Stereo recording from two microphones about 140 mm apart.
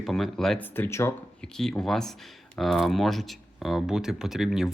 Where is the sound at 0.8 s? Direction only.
20° left (ahead or behind).